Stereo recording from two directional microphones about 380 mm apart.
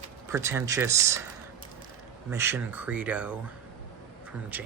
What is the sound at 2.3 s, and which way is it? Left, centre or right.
Speech, centre.